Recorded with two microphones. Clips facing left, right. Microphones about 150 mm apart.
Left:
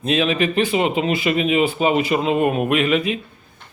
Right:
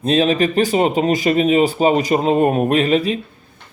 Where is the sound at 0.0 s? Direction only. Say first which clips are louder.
Right 4 dB; 35° right (ahead or behind).